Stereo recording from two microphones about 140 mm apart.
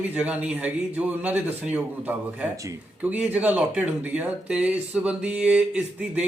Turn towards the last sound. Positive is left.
turn(degrees=-10)  # may be behind; listen again after turning